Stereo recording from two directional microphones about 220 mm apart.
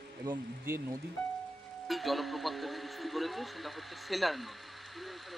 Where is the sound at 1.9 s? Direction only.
Centre (ahead or behind).